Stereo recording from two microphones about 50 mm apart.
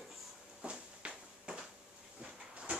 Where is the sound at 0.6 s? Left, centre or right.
Right.